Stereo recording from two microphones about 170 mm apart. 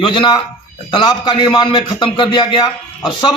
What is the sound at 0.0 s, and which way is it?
A man's voice, 25° left (ahead or behind).